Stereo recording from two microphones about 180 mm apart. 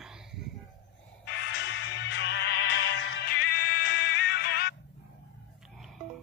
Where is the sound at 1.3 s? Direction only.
75° left (ahead or behind).